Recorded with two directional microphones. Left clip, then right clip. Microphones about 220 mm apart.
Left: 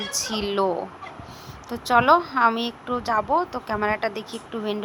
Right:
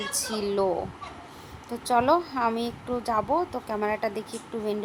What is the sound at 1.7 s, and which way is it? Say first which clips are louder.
A woman's voice: left 5 dB; 5° left (ahead or behind).